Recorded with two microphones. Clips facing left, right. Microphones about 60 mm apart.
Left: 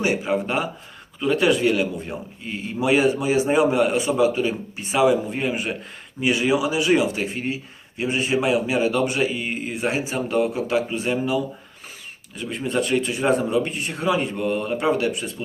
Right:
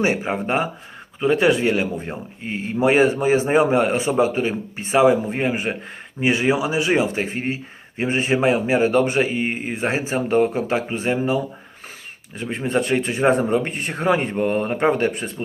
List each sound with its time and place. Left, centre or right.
0.0 s speech: right